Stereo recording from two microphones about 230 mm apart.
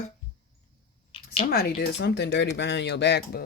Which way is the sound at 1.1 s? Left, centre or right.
Left.